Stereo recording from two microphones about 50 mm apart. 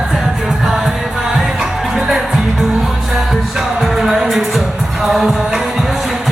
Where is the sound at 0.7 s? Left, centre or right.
Centre.